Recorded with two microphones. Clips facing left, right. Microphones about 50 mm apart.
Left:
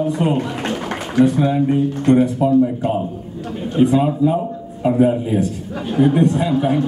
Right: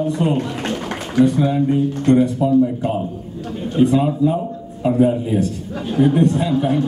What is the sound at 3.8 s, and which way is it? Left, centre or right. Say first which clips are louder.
A man's voice: left 1 dB; centre.